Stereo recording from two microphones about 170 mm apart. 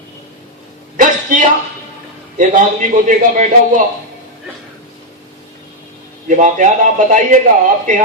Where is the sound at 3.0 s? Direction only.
50° right (ahead or behind).